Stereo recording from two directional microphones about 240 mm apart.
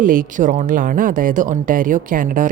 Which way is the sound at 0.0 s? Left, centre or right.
Right.